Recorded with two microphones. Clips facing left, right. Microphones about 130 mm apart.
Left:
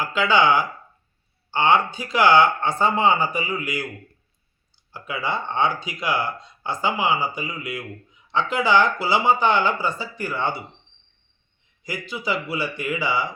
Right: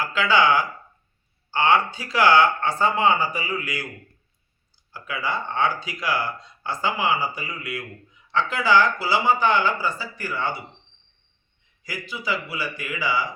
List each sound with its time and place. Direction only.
0.0 s speech: 20° left (ahead or behind)
4.9 s speech: 20° left (ahead or behind)
11.9 s speech: 25° left (ahead or behind)